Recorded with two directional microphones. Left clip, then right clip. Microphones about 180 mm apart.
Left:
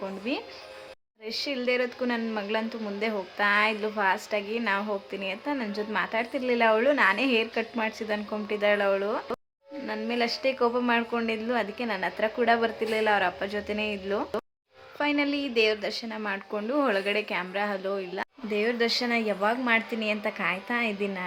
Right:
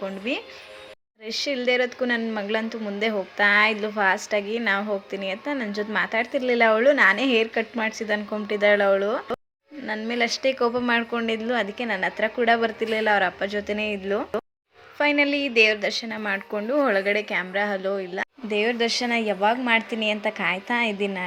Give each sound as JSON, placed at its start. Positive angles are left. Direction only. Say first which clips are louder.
{"t": 0.0, "sound": "speech", "louder": "right 4 dB", "side_deg": -10}